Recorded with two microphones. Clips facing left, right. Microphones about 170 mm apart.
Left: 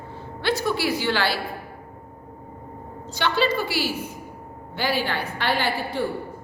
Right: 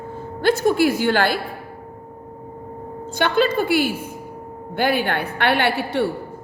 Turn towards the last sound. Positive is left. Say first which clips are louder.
# right 5 dB
turn(degrees=-70)  # may be behind; listen again after turning